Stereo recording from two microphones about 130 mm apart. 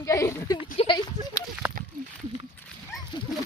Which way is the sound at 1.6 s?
10° right (ahead or behind).